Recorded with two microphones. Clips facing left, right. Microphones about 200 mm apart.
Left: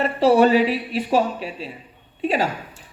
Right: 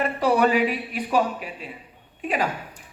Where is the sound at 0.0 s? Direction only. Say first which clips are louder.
Left 5 dB; 30° left (ahead or behind).